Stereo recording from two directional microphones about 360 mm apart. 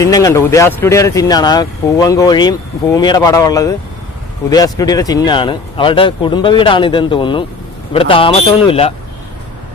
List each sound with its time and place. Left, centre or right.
0.0 s speech: centre
4.7 s speech: centre